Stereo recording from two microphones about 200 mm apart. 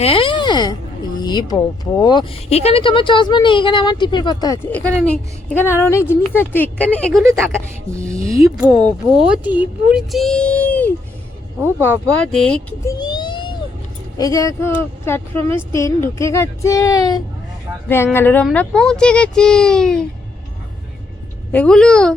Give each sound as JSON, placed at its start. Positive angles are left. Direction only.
{"t": 0.0, "sound": "speech", "side_deg": 25}
{"t": 8.4, "sound": "speech", "side_deg": -5}
{"t": 11.6, "sound": "speech", "side_deg": -10}
{"t": 12.3, "sound": "speech", "side_deg": 5}
{"t": 12.8, "sound": "a sound", "side_deg": 20}
{"t": 14.2, "sound": "speech", "side_deg": 15}
{"t": 21.5, "sound": "speech", "side_deg": 5}